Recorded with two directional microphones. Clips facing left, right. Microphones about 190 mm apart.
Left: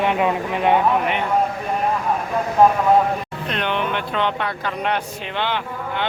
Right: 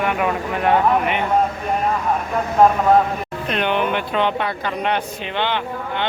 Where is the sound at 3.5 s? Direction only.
10° right (ahead or behind).